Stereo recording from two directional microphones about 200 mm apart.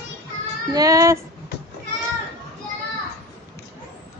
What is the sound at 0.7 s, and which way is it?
Child singing, 15° right (ahead or behind).